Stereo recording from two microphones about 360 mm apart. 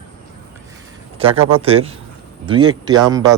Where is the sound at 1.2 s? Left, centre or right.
Centre.